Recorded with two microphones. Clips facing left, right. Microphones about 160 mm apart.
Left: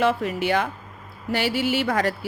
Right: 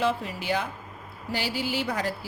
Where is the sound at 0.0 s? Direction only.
65° left (ahead or behind).